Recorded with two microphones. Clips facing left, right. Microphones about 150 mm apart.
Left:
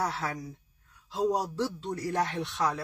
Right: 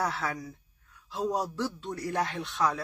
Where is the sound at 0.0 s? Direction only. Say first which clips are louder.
Right 1 dB; 25° left (ahead or behind).